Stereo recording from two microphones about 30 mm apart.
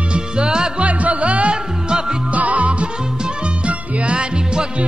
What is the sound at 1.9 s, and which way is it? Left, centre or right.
Music, right.